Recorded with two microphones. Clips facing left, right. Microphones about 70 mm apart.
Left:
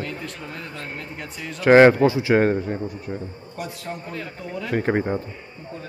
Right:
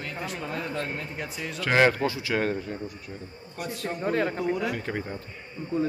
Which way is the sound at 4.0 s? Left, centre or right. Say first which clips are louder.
Right 8 dB; right.